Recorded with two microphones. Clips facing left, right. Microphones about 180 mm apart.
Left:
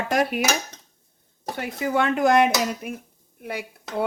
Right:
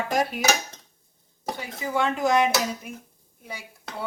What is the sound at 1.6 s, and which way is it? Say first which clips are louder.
Speech: left 4 dB; 65° left (ahead or behind).